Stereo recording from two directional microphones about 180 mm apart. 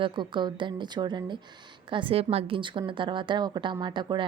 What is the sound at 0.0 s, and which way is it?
A woman's voice, 25° right (ahead or behind).